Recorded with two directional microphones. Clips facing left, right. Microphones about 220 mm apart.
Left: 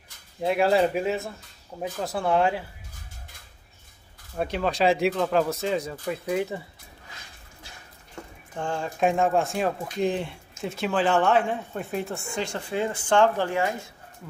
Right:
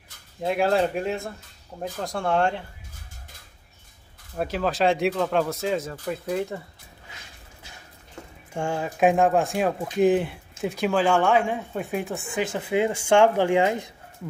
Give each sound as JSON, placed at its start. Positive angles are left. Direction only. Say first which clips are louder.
{"t": 0.4, "sound": "speech", "louder": "left 1 dB", "side_deg": 0}
{"t": 4.4, "sound": "speech", "louder": "right 1 dB", "side_deg": 0}
{"t": 8.5, "sound": "speech", "louder": "right 3 dB", "side_deg": -10}
{"t": 12.6, "sound": "speech", "louder": "right 6 dB", "side_deg": -15}